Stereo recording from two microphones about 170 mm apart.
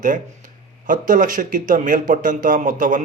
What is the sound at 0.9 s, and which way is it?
Speech, 50° right (ahead or behind).